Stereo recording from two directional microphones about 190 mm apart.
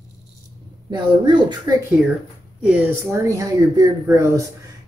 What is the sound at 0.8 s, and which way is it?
Speech, 20° right (ahead or behind).